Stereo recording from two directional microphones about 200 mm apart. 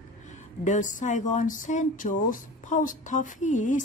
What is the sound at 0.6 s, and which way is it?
Speech, 40° left (ahead or behind).